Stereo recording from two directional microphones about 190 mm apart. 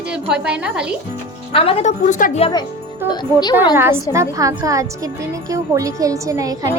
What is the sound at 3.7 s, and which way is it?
A woman's voice, 10° right (ahead or behind).